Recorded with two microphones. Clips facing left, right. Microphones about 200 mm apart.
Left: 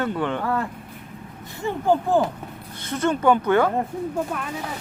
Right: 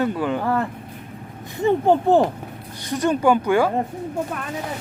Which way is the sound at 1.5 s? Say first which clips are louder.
Right 4 dB; 20° right (ahead or behind).